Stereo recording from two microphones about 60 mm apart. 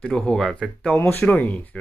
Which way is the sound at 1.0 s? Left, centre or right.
Left.